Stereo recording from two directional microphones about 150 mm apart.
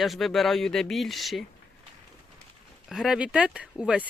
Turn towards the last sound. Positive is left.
turn(degrees=-5)  # may be behind; listen again after turning